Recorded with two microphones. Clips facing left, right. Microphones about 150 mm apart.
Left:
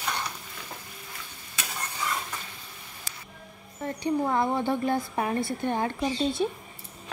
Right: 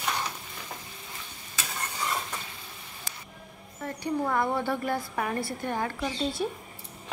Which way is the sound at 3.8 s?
20° left (ahead or behind).